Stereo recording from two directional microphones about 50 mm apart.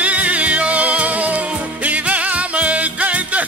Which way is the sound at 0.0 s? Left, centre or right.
Right.